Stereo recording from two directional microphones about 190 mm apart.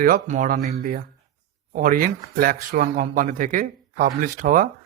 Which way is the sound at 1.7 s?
45° right (ahead or behind).